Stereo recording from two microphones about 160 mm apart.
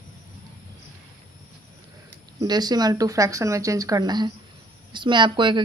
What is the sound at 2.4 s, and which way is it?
A woman's voice, 25° right (ahead or behind).